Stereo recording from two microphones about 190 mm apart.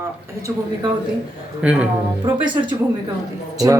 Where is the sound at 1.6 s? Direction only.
5° right (ahead or behind).